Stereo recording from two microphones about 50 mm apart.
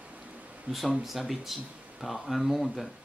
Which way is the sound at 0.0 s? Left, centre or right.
Right.